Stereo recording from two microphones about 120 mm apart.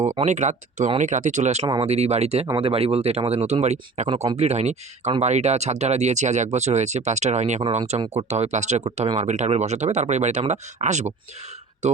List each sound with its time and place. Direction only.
0.2 s speech: 80° right
1.6 s speech: 40° right (ahead or behind)
1.9 s speech: 65° right (ahead or behind)
7.6 s speech: 60° right (ahead or behind)